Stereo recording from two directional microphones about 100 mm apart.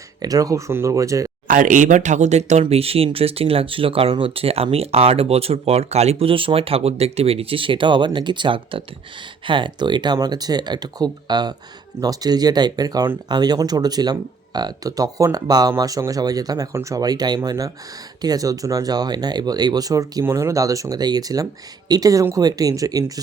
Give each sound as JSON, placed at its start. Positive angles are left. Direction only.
{"t": 0.2, "sound": "speech", "side_deg": -35}
{"t": 2.3, "sound": "speech", "side_deg": -90}